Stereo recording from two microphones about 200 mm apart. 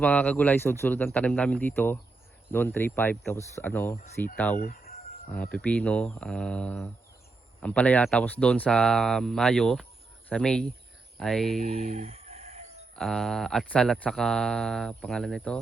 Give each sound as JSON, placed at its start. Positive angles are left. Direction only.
{"t": 0.0, "sound": "speech", "side_deg": 5}
{"t": 4.5, "sound": "speech", "side_deg": 45}
{"t": 5.3, "sound": "speech", "side_deg": 5}
{"t": 11.6, "sound": "chicken", "side_deg": -35}
{"t": 13.0, "sound": "speech", "side_deg": 0}